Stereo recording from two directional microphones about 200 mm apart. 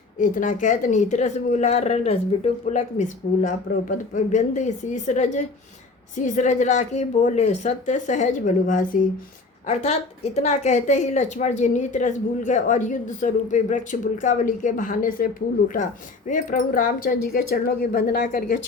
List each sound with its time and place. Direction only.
0.2 s a woman's voice: 40° left (ahead or behind)
9.6 s a woman's voice: 30° left (ahead or behind)